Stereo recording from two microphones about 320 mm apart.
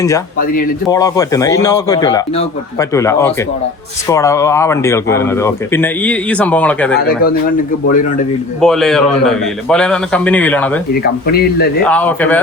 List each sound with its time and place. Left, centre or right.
0.3 s speech: left
0.9 s speech: centre
7.0 s speech: left
8.6 s a man's voice: centre
11.0 s speech: left
11.8 s a man's voice: centre